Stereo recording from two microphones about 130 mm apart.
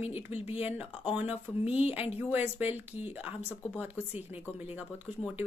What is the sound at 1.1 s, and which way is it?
A woman's voice, 10° right (ahead or behind).